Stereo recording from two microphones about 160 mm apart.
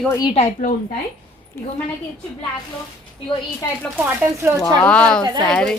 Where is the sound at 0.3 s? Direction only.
45° left (ahead or behind).